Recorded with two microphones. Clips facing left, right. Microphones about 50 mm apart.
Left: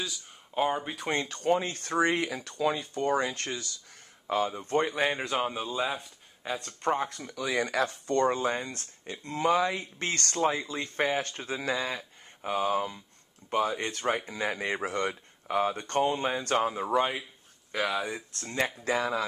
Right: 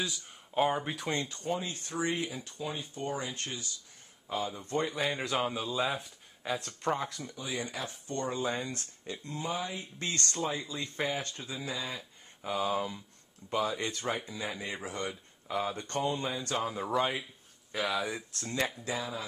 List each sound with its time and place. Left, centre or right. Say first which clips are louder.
0.6 s speech: left 1 dB; centre
1.0 s speech: left 3 dB; left
1.4 s speech: left 7 dB; left
4.5 s speech: left 5 dB; left
5.2 s speech: left 2 dB; centre
5.8 s speech: left 1 dB; centre
7.3 s speech: left 10 dB; left
9.4 s speech: left 11 dB; left
9.9 s speech: left 4 dB; left
12.4 s speech: left 3 dB; left
12.7 s speech: left 3 dB; centre
13.4 s speech: left 3 dB; left
16.7 s speech: left 3 dB; centre
18.9 s speech: left 8 dB; left